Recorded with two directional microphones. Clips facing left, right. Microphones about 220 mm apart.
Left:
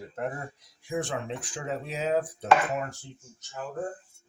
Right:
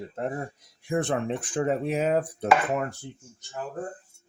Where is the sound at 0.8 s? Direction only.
60° right (ahead or behind).